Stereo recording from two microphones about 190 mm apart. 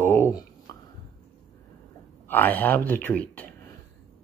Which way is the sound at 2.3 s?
10° left (ahead or behind).